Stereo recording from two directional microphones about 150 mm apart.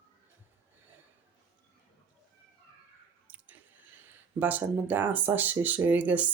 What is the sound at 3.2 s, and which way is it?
Squish, 10° right (ahead or behind).